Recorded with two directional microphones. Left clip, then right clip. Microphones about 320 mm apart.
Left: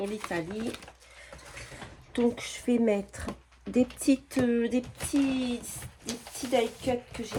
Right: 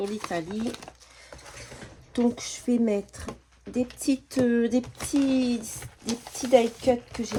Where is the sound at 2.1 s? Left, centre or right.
Centre.